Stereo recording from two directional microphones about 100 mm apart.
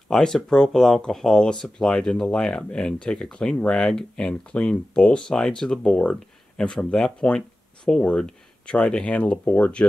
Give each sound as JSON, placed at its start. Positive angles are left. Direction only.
{"t": 0.1, "sound": "speech", "side_deg": 5}